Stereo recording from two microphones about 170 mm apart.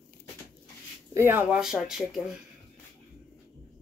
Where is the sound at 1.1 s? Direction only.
15° right (ahead or behind).